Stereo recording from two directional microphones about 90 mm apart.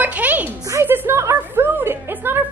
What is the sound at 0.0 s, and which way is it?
Music, 15° right (ahead or behind).